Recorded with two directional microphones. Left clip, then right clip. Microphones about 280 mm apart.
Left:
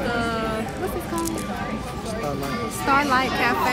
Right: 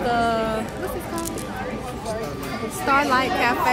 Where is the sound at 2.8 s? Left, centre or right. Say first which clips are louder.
Right 1 dB; centre.